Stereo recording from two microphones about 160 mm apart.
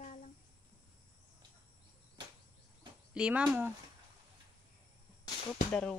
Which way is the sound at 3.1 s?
5° right (ahead or behind).